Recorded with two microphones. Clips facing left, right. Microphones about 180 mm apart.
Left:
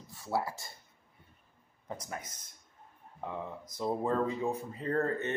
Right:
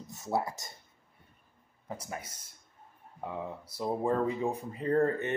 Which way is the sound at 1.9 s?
10° right (ahead or behind).